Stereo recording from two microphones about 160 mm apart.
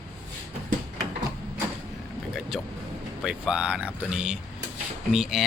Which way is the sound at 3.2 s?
5° right (ahead or behind).